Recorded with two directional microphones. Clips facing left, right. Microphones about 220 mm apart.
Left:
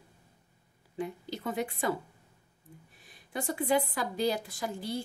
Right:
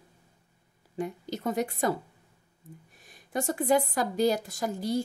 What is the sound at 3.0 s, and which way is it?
A woman's voice, 45° right (ahead or behind).